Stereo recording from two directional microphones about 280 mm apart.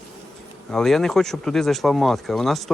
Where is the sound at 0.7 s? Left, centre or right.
Centre.